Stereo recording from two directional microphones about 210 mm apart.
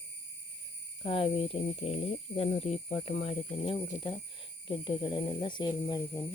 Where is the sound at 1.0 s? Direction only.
25° left (ahead or behind).